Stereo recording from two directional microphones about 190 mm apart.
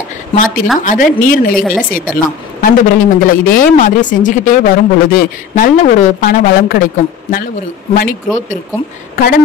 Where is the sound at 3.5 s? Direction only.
45° left (ahead or behind).